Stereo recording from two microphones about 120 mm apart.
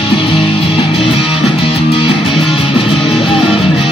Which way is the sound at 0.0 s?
45° left (ahead or behind).